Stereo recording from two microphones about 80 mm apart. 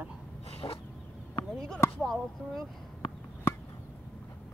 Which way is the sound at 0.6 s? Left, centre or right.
Left.